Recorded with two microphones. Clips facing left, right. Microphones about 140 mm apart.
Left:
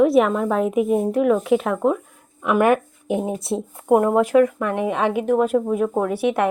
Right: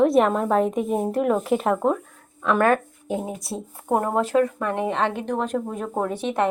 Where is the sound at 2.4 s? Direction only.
15° left (ahead or behind).